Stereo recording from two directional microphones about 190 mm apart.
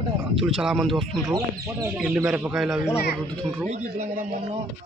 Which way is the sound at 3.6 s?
40° right (ahead or behind).